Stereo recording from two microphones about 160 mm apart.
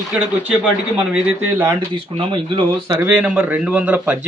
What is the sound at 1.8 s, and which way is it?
Speech, 30° right (ahead or behind).